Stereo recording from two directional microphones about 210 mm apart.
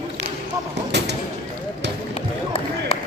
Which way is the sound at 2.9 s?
25° left (ahead or behind).